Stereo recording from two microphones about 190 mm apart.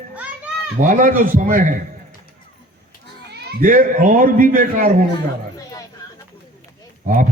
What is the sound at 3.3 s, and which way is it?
Speech, 45° right (ahead or behind).